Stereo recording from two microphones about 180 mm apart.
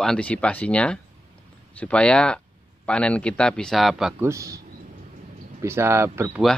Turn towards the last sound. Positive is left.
turn(degrees=-15)  # may be behind; listen again after turning